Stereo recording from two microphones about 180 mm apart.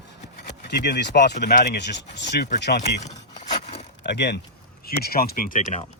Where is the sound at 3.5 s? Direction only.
35° left (ahead or behind).